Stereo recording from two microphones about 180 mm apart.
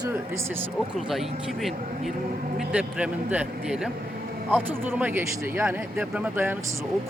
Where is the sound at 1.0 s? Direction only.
Centre (ahead or behind).